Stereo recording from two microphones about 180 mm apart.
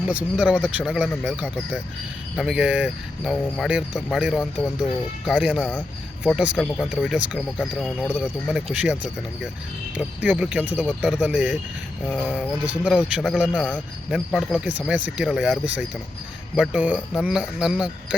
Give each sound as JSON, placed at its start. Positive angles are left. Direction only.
{"t": 0.0, "sound": "speech", "side_deg": -5}
{"t": 10.0, "sound": "speech", "side_deg": -5}
{"t": 12.0, "sound": "music", "side_deg": 5}
{"t": 12.3, "sound": "speech", "side_deg": -5}